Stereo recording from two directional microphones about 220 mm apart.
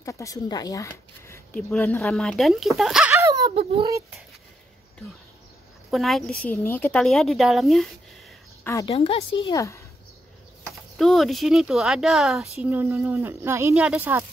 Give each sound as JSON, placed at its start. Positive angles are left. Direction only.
{"t": 0.0, "sound": "a woman's voice", "side_deg": 15}
{"t": 5.9, "sound": "a woman's voice", "side_deg": 0}
{"t": 8.8, "sound": "a woman's voice", "side_deg": 25}
{"t": 9.5, "sound": "speech", "side_deg": 15}
{"t": 11.0, "sound": "a woman's voice", "side_deg": 0}